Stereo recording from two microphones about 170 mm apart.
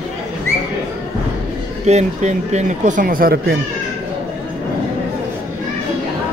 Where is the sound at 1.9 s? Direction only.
40° right (ahead or behind); by 3.5 s 60° right (ahead or behind).